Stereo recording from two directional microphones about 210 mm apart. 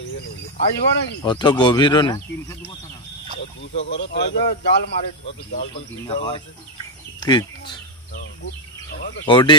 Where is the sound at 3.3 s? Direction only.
55° left (ahead or behind).